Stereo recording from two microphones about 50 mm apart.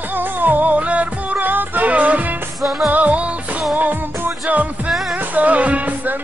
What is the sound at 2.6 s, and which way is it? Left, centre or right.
Music, centre.